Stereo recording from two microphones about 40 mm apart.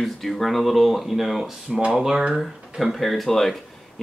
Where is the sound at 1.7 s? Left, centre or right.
Right.